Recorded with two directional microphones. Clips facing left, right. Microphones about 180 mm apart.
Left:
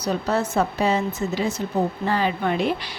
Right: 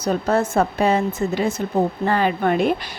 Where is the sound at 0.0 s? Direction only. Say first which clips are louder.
Right 4 dB; 50° right (ahead or behind).